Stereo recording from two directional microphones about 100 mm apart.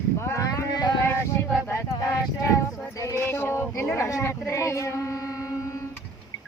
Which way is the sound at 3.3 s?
25° left (ahead or behind).